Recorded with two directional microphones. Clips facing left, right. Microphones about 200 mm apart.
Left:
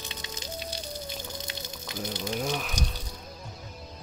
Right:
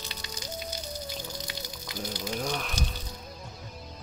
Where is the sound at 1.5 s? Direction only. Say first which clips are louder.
Left 1 dB; 25° left (ahead or behind).